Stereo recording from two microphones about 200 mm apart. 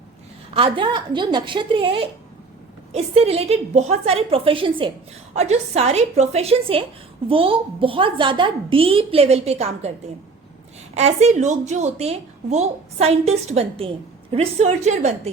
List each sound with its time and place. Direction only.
0.5 s a woman's voice: 25° right (ahead or behind)
10.9 s a woman's voice: 35° right (ahead or behind)